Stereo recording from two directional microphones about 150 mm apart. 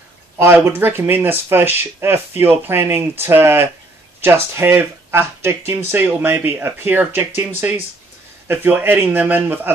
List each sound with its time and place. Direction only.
0.4 s speech: 15° right (ahead or behind)